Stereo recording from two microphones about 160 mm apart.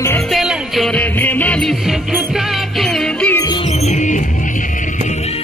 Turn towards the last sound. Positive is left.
turn(degrees=45)  # may be behind; listen again after turning